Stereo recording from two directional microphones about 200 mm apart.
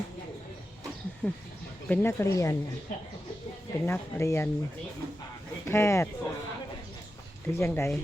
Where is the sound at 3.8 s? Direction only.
15° left (ahead or behind).